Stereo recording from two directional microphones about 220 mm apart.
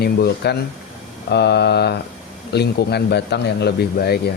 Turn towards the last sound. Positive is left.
turn(degrees=45)  # may be behind; listen again after turning